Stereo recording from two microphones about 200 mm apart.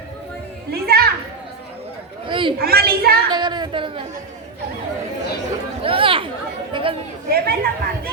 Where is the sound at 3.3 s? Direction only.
20° right (ahead or behind).